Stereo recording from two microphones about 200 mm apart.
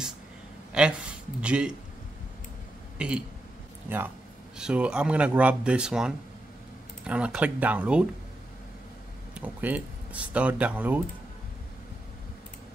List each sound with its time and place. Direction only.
0.7 s speech: 5° right (ahead or behind)
3.0 s speech: 5° right (ahead or behind)
4.6 s speech: 5° right (ahead or behind)
9.3 s speech: 10° right (ahead or behind)